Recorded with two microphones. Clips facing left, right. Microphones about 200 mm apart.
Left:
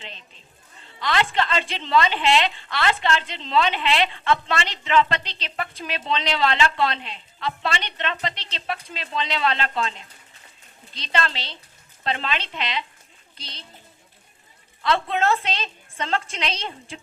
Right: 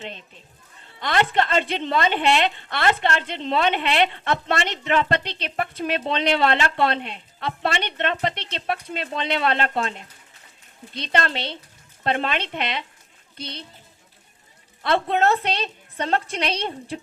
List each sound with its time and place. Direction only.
0.0 s a woman's voice: 55° right (ahead or behind)
14.8 s a woman's voice: 55° right (ahead or behind)